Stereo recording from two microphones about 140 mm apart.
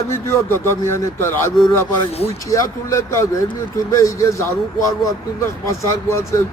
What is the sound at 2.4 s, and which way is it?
A man's voice, 20° left (ahead or behind).